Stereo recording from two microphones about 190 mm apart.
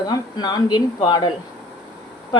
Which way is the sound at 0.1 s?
20° left (ahead or behind).